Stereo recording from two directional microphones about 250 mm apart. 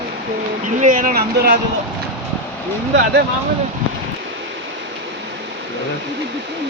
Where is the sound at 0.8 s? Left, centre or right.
Right.